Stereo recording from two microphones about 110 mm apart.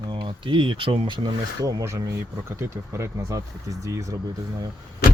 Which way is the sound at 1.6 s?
30° right (ahead or behind).